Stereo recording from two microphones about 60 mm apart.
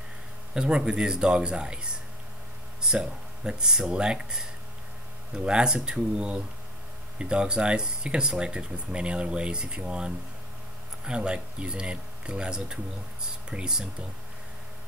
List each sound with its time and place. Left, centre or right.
0.6 s speech: centre